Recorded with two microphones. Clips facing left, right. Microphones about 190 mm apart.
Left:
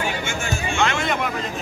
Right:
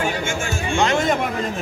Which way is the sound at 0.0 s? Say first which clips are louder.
Right 3 dB; 45° right (ahead or behind).